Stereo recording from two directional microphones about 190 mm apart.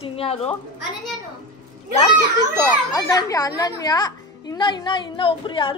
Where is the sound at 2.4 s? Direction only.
20° left (ahead or behind).